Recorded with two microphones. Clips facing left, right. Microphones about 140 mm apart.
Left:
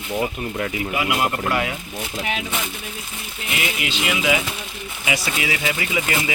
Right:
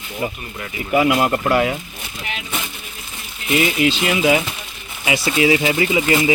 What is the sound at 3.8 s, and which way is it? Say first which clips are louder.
Speech: right 6 dB; 35° right (ahead or behind).